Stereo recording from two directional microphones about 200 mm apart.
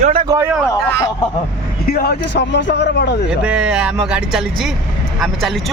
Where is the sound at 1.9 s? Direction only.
50° left (ahead or behind).